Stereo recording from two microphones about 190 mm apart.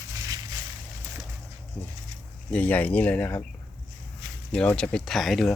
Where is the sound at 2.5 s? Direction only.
10° left (ahead or behind).